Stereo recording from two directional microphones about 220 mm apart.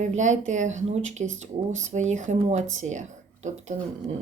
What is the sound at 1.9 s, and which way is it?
Speech, 35° right (ahead or behind).